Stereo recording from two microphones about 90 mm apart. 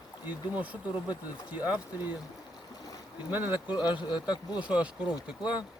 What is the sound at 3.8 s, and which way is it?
Speech, 55° left (ahead or behind).